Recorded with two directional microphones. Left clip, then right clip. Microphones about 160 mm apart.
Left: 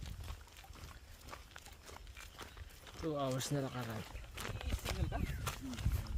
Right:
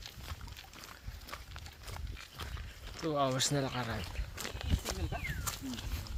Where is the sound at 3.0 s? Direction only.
Centre (ahead or behind).